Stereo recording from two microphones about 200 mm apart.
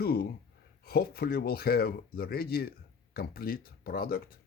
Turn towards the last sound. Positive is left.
turn(degrees=50)  # may be behind; listen again after turning